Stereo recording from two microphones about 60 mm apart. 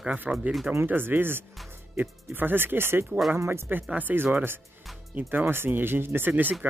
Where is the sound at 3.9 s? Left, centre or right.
Right.